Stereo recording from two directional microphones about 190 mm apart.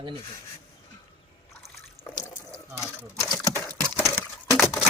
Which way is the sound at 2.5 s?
15° left (ahead or behind).